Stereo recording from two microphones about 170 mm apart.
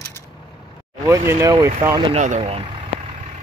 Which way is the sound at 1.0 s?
20° right (ahead or behind).